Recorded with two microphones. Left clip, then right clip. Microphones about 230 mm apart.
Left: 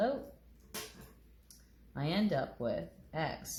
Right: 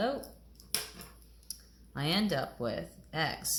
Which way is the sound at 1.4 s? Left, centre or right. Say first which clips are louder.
Right 14 dB; right.